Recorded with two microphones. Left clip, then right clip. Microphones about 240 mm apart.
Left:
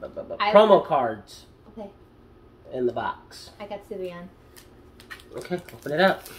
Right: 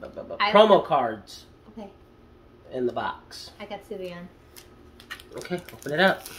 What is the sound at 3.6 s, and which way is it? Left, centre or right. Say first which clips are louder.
Speech: left 2 dB; centre.